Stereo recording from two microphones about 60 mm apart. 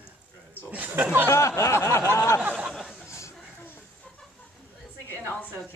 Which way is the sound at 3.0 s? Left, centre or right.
Left.